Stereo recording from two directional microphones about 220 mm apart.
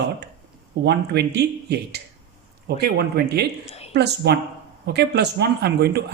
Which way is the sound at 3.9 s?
50° right (ahead or behind).